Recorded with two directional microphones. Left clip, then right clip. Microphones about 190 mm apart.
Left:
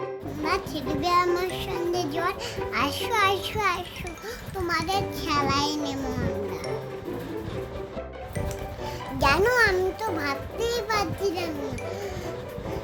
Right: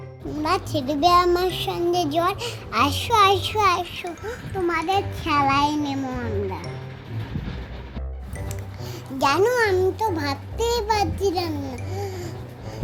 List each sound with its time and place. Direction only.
0.4 s child singing: 25° right (ahead or behind)
4.9 s child singing: 20° right (ahead or behind)
9.1 s a child's voice: 15° right (ahead or behind)
9.5 s child singing: 5° right (ahead or behind); by 11.5 s 25° right (ahead or behind)